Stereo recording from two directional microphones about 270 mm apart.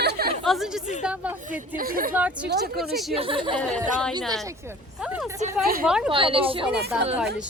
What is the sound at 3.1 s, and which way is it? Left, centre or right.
Speech, centre.